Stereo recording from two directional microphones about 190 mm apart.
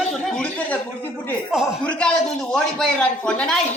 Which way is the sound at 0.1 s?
5° left (ahead or behind).